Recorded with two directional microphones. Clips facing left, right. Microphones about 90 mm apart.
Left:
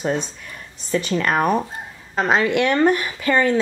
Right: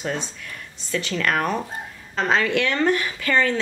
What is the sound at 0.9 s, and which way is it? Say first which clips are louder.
A woman's voice: left 3 dB; 20° left (ahead or behind).